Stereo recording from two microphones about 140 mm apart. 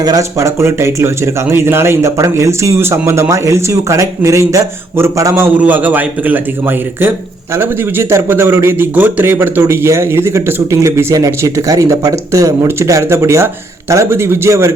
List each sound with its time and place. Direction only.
0.0 s speech: 25° right (ahead or behind)